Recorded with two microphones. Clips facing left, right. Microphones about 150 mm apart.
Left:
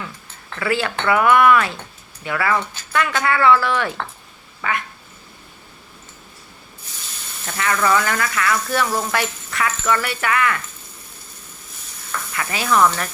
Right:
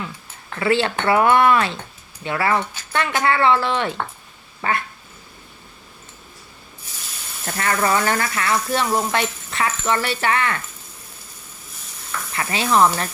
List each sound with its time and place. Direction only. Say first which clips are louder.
0.6 s speech: right 2 dB; 25° right (ahead or behind)
4.6 s cat: right 2 dB; 35° right (ahead or behind)
7.4 s speech: left 1 dB; 40° right (ahead or behind)
12.3 s speech: right 1 dB; 30° right (ahead or behind)